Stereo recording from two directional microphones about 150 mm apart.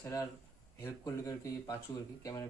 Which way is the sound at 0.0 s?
20° left (ahead or behind).